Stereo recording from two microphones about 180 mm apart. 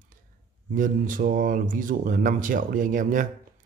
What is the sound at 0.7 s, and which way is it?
A man's voice, 50° right (ahead or behind).